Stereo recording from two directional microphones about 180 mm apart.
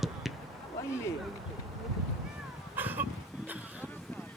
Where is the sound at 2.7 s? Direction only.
10° right (ahead or behind).